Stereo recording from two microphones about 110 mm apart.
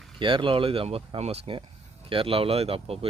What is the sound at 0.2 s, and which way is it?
Speech, 50° right (ahead or behind).